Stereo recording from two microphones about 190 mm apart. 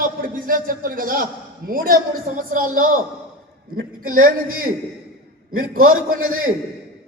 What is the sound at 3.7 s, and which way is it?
Speech, 90° right.